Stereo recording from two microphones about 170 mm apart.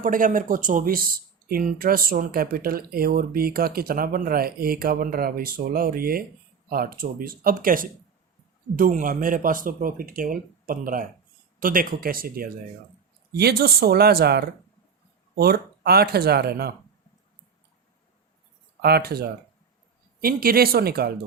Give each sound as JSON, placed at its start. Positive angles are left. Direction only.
{"t": 0.0, "sound": "speech", "side_deg": -50}
{"t": 18.8, "sound": "speech", "side_deg": -70}